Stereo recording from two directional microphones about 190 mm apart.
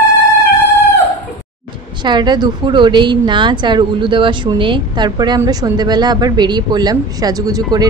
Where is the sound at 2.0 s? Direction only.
25° right (ahead or behind).